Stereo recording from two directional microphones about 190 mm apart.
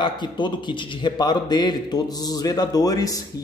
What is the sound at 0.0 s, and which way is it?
A man's voice, 25° left (ahead or behind).